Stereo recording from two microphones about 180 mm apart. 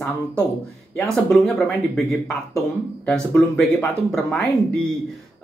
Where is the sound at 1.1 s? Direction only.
Centre (ahead or behind).